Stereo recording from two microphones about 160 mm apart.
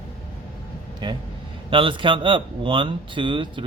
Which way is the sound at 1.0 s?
30° right (ahead or behind).